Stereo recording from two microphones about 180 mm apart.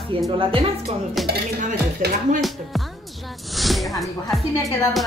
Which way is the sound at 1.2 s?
55° right (ahead or behind).